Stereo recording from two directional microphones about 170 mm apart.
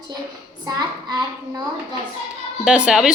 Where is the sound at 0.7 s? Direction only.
25° right (ahead or behind).